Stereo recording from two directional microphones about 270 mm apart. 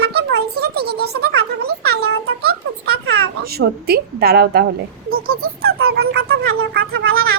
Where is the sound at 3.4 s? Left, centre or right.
Right.